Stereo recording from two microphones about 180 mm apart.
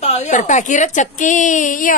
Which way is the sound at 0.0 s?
35° left (ahead or behind).